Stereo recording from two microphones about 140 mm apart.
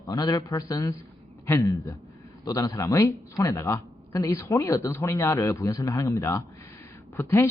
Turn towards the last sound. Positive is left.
turn(degrees=15)  # may be behind; listen again after turning